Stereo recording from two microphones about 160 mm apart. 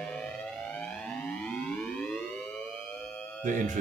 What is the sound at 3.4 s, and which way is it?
Speech, 55° right (ahead or behind).